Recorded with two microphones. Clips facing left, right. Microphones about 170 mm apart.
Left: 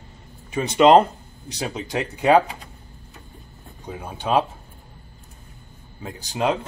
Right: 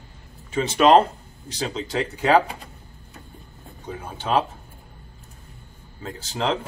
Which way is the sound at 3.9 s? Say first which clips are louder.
Left 2 dB; 15° left (ahead or behind).